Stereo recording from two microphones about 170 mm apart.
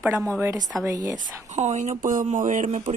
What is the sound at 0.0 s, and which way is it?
A woman's voice, 15° right (ahead or behind).